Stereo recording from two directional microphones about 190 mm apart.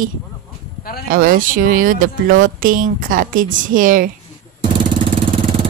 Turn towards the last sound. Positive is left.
turn(degrees=-45)  # may be behind; listen again after turning